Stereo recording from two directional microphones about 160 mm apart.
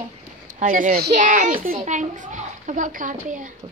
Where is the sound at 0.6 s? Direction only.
55° right (ahead or behind).